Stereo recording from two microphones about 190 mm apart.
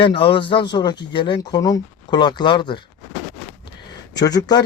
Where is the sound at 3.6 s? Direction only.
20° left (ahead or behind).